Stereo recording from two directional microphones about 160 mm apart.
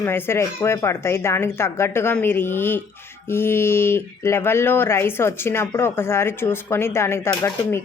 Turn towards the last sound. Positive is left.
turn(degrees=15)  # may be behind; listen again after turning